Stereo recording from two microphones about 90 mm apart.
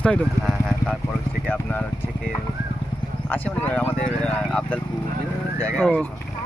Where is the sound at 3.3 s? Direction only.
20° left (ahead or behind).